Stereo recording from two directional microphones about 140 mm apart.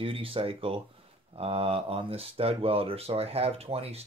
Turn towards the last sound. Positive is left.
turn(degrees=-45)  # may be behind; listen again after turning